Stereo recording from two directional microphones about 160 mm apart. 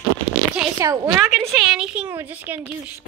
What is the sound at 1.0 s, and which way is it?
A woman's voice, 5° right (ahead or behind).